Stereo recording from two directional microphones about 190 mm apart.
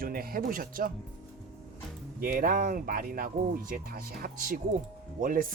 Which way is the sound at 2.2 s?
45° right (ahead or behind).